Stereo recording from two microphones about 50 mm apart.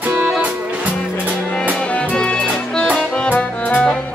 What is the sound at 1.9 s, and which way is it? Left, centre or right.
Music, left.